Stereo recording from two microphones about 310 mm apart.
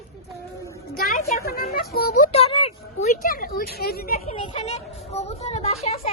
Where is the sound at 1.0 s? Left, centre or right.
Left.